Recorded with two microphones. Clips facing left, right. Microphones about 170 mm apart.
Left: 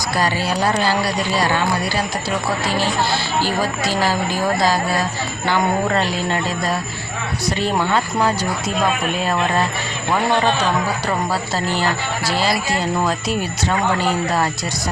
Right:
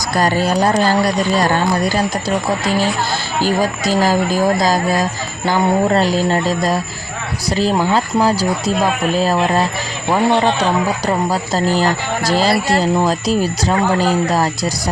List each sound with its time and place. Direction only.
0.2 s speech: 45° right (ahead or behind)
3.4 s speech: 45° right (ahead or behind)
7.9 s speech: 35° right (ahead or behind)
10.1 s speech: 20° right (ahead or behind)
11.5 s speech: 40° right (ahead or behind)